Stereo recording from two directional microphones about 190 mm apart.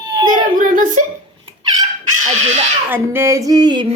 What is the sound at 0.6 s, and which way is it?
Speech, 45° right (ahead or behind).